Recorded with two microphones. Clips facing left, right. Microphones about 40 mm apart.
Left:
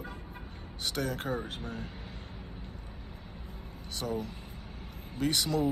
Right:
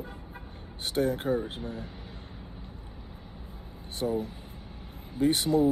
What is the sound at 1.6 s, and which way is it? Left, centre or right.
Speech, left.